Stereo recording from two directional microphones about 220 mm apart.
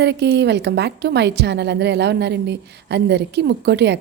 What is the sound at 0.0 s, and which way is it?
Speech, 50° right (ahead or behind).